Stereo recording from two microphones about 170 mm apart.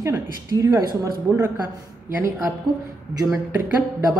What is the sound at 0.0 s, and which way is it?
Speech, 20° right (ahead or behind).